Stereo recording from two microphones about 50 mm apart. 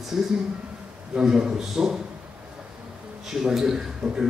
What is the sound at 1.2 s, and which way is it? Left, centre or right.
Speech, centre.